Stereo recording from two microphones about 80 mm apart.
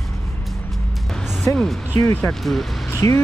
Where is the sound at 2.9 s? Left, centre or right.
Left.